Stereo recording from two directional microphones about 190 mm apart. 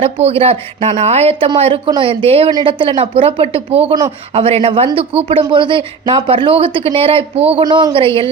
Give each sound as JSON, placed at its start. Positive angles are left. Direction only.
{"t": 0.0, "sound": "speech", "side_deg": -30}